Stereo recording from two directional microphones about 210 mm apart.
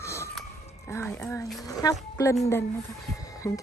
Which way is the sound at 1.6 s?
15° left (ahead or behind).